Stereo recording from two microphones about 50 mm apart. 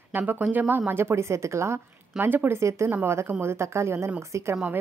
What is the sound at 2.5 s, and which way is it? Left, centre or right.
Speech, right.